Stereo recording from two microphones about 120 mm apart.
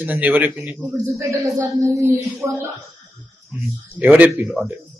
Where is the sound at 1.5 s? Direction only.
25° right (ahead or behind).